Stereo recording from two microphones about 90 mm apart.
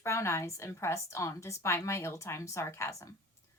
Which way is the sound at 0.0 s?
30° left (ahead or behind).